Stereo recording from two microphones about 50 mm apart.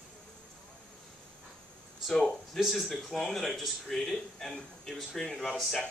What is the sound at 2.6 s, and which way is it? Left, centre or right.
Speech, centre.